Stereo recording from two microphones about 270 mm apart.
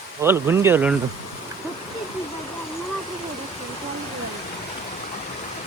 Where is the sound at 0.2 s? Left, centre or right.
Centre.